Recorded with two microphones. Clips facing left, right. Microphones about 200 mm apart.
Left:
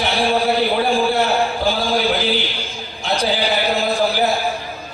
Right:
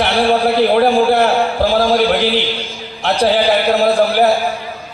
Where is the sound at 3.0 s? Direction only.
65° right (ahead or behind).